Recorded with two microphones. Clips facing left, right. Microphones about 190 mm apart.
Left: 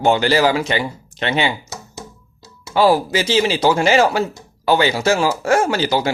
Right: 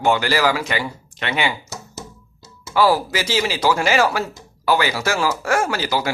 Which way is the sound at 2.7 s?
25° left (ahead or behind).